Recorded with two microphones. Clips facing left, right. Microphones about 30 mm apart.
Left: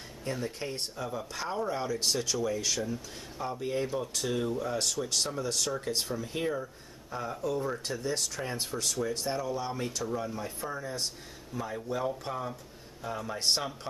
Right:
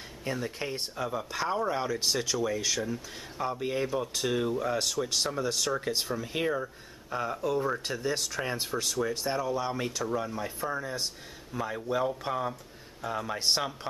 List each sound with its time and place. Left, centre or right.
0.3 s speech: centre
2.0 s speech: centre
13.4 s speech: centre